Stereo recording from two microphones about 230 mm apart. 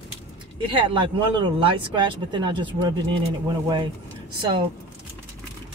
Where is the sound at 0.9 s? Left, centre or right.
Right.